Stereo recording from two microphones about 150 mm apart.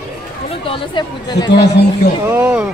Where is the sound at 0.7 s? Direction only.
30° left (ahead or behind).